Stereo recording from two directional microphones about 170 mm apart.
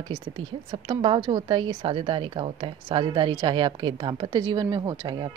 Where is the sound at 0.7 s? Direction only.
30° right (ahead or behind).